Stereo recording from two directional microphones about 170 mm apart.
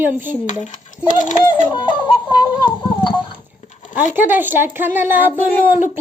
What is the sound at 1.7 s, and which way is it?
Music, 25° left (ahead or behind).